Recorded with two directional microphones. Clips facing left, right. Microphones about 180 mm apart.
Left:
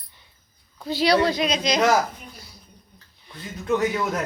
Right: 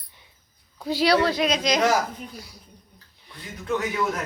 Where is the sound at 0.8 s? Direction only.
5° right (ahead or behind).